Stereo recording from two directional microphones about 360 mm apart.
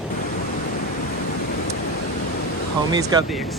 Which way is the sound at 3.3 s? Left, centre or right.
Centre.